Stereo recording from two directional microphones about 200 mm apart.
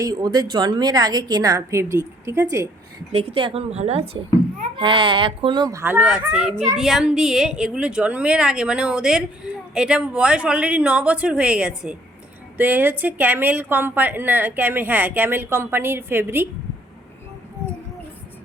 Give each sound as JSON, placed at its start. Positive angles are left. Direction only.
{"t": 0.0, "sound": "a woman's voice", "side_deg": -20}
{"t": 3.1, "sound": "a woman's voice", "side_deg": -30}